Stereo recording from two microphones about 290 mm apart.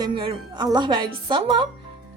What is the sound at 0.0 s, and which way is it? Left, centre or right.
A woman's voice, centre.